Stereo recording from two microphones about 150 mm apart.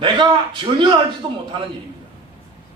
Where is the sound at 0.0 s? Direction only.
30° right (ahead or behind).